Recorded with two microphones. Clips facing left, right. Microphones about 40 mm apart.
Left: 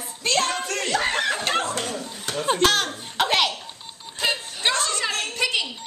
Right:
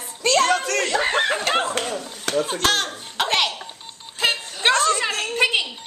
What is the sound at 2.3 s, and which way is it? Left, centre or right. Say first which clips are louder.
Chuckle: right 7 dB; right.